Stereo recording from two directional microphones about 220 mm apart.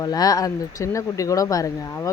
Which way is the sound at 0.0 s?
15° left (ahead or behind).